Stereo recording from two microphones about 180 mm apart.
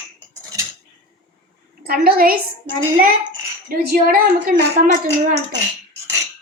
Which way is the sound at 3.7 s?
55° right (ahead or behind).